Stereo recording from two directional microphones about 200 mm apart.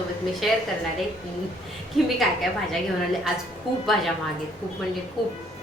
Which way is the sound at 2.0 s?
Centre (ahead or behind).